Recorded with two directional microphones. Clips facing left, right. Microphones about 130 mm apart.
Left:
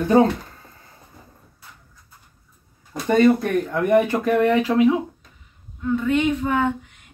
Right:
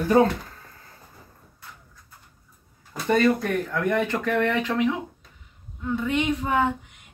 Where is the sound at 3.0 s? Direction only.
20° left (ahead or behind).